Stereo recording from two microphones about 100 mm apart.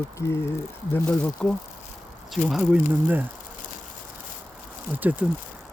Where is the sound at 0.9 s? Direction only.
10° left (ahead or behind).